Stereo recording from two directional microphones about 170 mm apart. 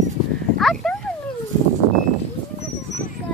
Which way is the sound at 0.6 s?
Centre (ahead or behind).